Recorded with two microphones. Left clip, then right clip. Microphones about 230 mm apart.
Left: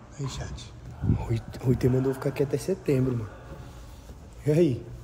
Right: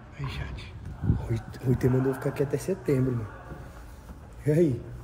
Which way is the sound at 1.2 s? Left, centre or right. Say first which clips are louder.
Left 2 dB; centre.